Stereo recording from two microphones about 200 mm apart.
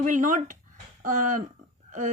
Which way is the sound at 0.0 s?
40° right (ahead or behind).